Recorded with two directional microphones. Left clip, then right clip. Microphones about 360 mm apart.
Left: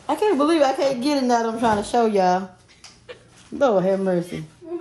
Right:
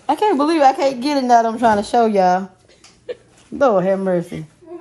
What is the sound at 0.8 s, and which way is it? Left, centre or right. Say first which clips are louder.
A woman's voice: right 4 dB; right.